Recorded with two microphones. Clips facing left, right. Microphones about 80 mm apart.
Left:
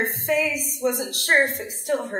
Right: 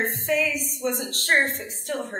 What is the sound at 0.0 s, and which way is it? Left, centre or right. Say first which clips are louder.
A woman's voice: left 1 dB; centre.